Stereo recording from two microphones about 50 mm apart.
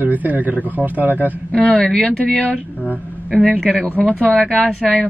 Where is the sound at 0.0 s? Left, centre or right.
Right.